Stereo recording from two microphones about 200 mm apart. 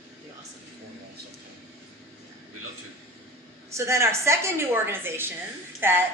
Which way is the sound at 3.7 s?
15° right (ahead or behind).